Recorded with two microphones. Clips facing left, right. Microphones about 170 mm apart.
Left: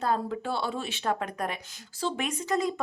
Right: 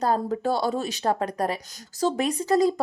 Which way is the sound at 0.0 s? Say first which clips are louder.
Right 5 dB; 40° right (ahead or behind).